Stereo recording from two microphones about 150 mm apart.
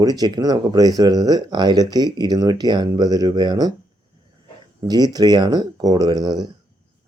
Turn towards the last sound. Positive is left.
turn(degrees=-25)  # may be behind; listen again after turning